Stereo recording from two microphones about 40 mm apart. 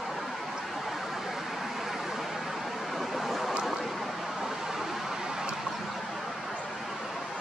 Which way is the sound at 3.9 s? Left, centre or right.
Centre.